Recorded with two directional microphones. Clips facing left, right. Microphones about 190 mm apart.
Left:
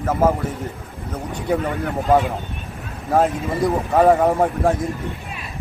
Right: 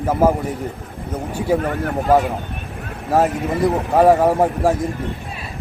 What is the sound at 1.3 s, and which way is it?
Speech, 5° right (ahead or behind).